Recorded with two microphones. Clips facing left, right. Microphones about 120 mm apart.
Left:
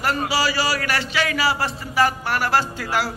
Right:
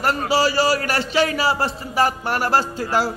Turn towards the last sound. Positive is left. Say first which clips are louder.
# right 2 dB
turn(degrees=-40)  # may be behind; listen again after turning